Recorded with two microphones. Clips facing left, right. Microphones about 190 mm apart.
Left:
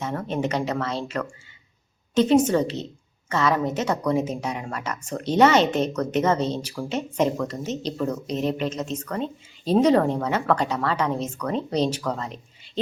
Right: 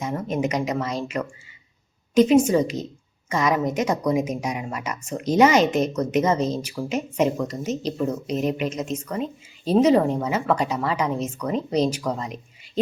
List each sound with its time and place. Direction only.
0.0 s a woman's voice: 10° right (ahead or behind)